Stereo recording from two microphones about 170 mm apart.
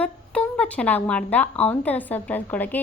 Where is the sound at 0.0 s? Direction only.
5° left (ahead or behind).